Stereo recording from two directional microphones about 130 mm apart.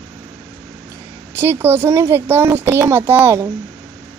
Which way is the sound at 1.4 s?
20° right (ahead or behind).